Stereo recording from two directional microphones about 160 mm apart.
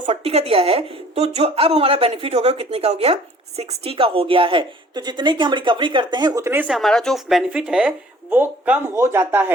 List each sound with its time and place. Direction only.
0.0 s a woman's voice: 40° right (ahead or behind); by 6.7 s 15° right (ahead or behind)
6.7 s speech: centre (ahead or behind)